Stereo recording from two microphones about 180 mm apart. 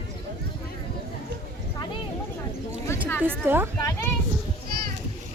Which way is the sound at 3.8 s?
15° left (ahead or behind).